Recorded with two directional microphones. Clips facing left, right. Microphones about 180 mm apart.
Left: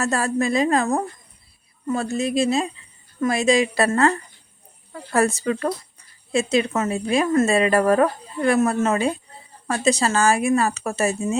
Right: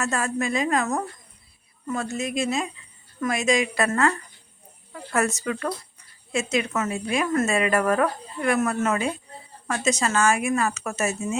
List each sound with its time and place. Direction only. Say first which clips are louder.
0.0 s speech: left 4 dB; 35° left (ahead or behind)